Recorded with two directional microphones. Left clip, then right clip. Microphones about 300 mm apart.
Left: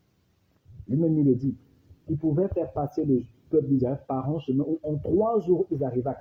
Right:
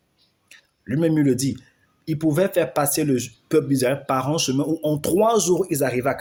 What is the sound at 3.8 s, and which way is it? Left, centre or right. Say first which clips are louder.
Speech: right 7 dB; right.